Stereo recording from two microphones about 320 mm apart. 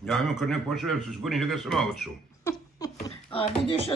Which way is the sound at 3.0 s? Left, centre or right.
Centre.